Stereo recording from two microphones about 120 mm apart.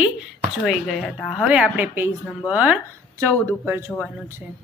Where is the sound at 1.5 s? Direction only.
10° right (ahead or behind).